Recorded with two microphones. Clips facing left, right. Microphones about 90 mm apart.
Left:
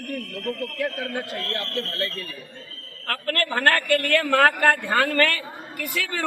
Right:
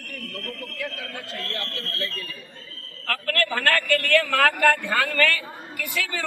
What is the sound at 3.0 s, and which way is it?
A man's voice, 25° left (ahead or behind).